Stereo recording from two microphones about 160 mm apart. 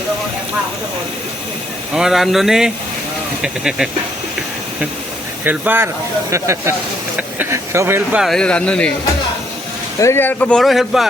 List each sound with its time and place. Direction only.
2.0 s speech: centre (ahead or behind)
5.5 s speech: 10° right (ahead or behind)
8.2 s speech: 5° left (ahead or behind)
10.0 s speech: 15° left (ahead or behind); by 11.1 s centre (ahead or behind)